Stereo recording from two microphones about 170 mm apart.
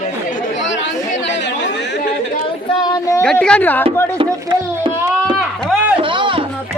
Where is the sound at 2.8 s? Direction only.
25° left (ahead or behind).